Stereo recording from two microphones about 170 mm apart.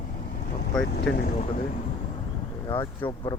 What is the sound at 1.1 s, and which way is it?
Speech, 5° left (ahead or behind).